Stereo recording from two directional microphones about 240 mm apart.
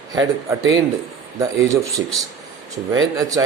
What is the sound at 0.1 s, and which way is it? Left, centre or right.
Speech, centre.